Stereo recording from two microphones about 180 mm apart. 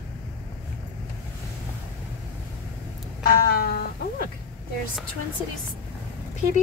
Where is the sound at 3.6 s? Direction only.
55° left (ahead or behind).